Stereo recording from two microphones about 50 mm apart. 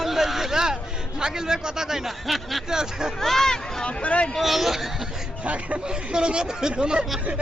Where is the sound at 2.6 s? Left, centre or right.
Centre.